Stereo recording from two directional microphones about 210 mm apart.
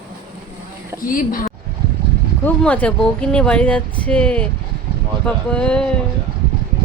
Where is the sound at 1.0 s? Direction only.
40° left (ahead or behind).